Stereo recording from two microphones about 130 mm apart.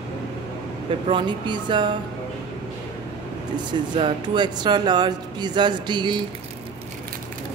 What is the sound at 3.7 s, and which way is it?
Speech, 40° right (ahead or behind).